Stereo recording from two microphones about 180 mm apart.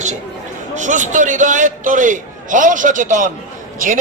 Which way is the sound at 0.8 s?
45° right (ahead or behind).